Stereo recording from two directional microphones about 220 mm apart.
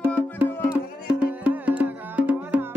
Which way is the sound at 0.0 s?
5° right (ahead or behind).